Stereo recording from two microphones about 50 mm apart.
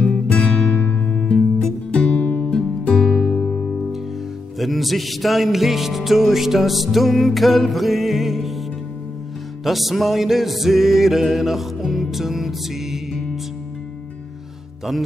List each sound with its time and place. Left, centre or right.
0.0 s music: left
0.4 s music: centre
0.7 s music: left
1.2 s music: centre
1.9 s music: left
2.4 s music: centre
4.6 s music: centre
9.7 s music: centre